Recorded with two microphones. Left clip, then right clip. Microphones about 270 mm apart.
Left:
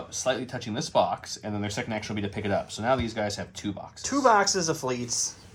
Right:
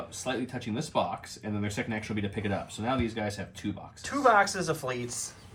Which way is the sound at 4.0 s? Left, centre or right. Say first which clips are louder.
Left 2 dB; centre.